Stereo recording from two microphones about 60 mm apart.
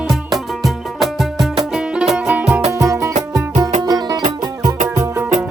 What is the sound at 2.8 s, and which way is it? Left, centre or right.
Music, right.